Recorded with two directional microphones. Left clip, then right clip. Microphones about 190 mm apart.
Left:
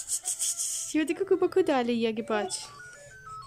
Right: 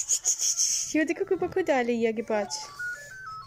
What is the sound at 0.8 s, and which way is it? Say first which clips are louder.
Speech: left 5 dB; 5° left (ahead or behind).